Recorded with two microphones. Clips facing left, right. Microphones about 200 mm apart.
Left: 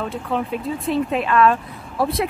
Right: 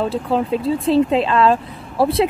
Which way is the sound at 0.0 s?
30° right (ahead or behind).